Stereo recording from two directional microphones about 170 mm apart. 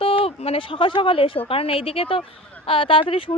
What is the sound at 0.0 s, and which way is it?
Speech, 35° left (ahead or behind).